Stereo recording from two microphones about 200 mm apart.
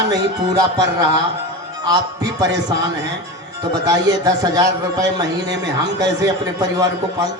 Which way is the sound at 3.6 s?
20° right (ahead or behind).